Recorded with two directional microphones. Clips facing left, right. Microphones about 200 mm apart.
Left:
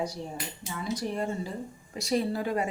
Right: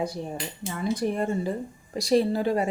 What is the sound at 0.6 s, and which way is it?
Speech, 55° right (ahead or behind).